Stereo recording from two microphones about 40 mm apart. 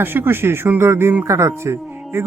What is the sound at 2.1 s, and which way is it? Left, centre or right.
Speech, right.